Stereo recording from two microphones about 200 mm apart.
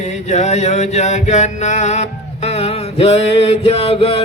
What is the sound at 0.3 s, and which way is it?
Music, 35° left (ahead or behind).